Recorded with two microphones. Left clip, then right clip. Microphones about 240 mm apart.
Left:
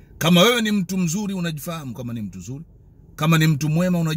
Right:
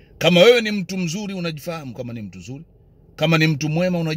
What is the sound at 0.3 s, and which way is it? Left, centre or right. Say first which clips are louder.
A man's voice: right 4 dB; centre.